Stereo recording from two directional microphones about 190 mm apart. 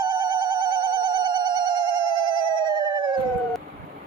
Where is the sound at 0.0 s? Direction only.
25° right (ahead or behind).